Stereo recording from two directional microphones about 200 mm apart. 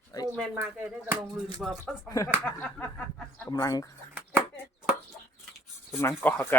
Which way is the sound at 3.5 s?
20° left (ahead or behind).